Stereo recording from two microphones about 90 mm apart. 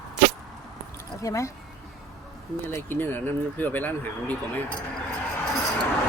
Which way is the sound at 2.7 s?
25° left (ahead or behind).